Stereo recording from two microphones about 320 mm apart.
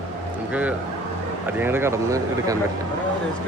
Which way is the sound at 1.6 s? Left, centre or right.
Centre.